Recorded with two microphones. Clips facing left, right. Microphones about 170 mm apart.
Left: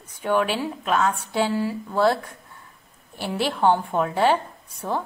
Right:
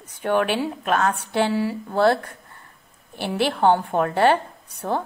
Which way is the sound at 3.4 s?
60° right (ahead or behind).